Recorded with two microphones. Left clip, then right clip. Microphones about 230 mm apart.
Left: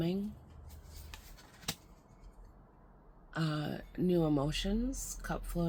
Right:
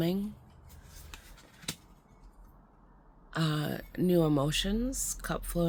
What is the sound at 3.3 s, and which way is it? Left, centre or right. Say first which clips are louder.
Speech: right 4 dB; right.